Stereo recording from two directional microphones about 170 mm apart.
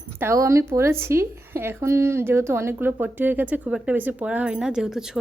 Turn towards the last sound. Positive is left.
turn(degrees=-5)  # may be behind; listen again after turning